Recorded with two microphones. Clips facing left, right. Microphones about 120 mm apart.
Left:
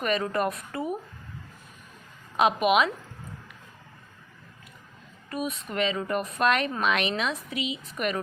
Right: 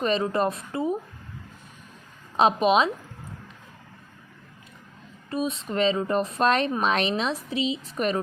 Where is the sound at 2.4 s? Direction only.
30° right (ahead or behind).